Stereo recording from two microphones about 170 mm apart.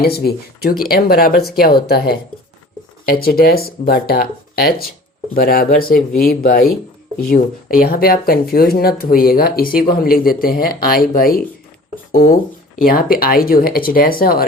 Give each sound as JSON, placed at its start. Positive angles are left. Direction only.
{"t": 0.0, "sound": "speech", "side_deg": 65}